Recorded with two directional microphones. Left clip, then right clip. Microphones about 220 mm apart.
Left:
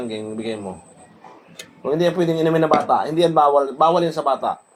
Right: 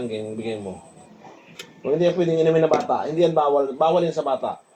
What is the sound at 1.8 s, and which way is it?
A man's voice, 45° left (ahead or behind).